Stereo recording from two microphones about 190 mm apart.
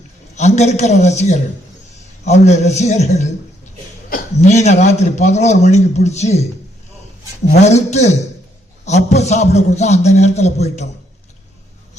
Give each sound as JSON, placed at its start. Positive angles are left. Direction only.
{"t": 0.3, "sound": "a man's voice", "side_deg": 35}
{"t": 7.5, "sound": "a man's voice", "side_deg": 35}